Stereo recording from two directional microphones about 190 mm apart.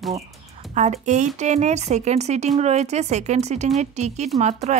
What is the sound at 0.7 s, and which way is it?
A woman's voice, 40° right (ahead or behind).